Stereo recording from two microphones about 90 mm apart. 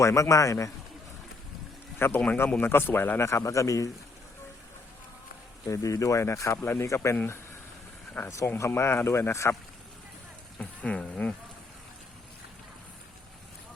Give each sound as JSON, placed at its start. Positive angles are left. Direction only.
{"t": 0.0, "sound": "speech", "side_deg": 35}
{"t": 2.0, "sound": "a man's voice", "side_deg": 25}
{"t": 5.6, "sound": "speech", "side_deg": 35}
{"t": 8.3, "sound": "speech", "side_deg": 35}
{"t": 10.6, "sound": "insect", "side_deg": 15}